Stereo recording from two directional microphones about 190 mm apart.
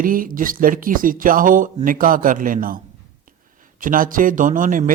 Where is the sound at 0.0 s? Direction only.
45° right (ahead or behind).